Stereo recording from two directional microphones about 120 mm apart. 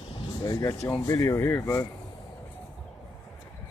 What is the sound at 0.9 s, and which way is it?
Speech, 25° left (ahead or behind).